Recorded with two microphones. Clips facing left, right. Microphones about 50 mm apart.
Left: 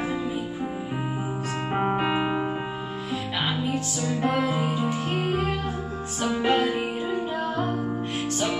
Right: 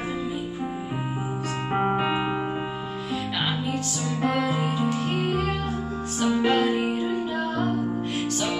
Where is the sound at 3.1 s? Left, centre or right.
Centre.